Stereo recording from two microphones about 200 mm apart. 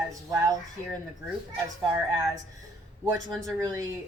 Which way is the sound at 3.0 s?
15° right (ahead or behind).